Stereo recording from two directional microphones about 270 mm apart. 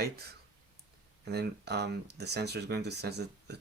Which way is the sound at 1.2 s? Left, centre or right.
Right.